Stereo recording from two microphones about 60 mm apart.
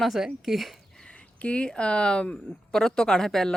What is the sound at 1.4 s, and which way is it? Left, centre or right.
Speech, centre.